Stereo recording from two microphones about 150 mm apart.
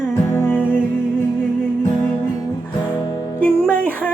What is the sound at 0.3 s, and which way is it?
Music, 15° left (ahead or behind).